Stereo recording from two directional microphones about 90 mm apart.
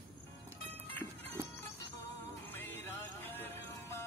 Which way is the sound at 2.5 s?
25° left (ahead or behind).